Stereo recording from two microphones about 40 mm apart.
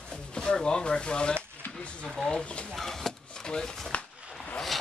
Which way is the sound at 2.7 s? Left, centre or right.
Centre.